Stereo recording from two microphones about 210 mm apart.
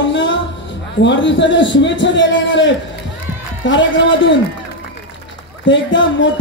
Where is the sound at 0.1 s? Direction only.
60° left (ahead or behind).